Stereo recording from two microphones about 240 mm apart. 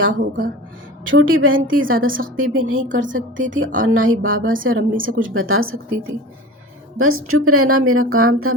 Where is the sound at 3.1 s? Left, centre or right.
Right.